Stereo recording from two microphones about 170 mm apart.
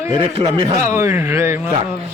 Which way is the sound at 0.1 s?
30° right (ahead or behind).